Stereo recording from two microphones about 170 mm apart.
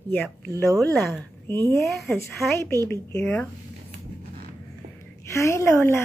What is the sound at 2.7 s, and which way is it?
Speech, 15° left (ahead or behind).